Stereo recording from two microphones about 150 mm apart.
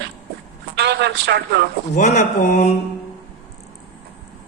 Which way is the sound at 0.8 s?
90° right.